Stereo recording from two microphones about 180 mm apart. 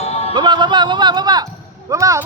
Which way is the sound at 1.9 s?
15° right (ahead or behind).